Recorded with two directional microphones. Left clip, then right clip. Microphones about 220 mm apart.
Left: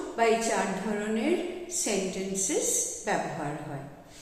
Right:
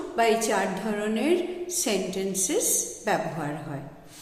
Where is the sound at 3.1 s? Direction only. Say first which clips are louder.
Right 4 dB; 50° right (ahead or behind).